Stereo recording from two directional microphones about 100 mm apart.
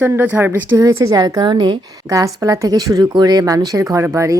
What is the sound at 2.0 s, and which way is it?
A woman's voice, 35° right (ahead or behind).